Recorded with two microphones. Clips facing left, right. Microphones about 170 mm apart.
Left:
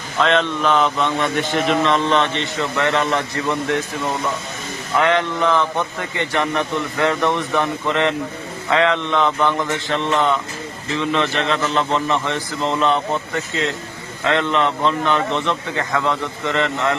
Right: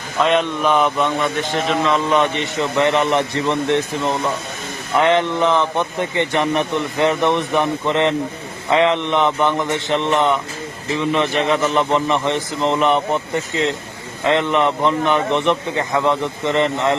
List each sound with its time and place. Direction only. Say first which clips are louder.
0.2 s a man's voice: right 1 dB; 10° right (ahead or behind)
4.9 s a man's voice: right 2 dB; 20° right (ahead or behind)